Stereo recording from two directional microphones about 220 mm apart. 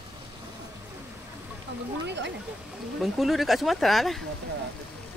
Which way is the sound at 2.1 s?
50° right (ahead or behind).